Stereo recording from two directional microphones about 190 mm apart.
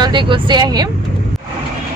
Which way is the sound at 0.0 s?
25° right (ahead or behind).